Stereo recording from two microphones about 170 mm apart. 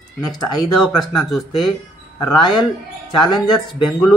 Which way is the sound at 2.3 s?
25° left (ahead or behind).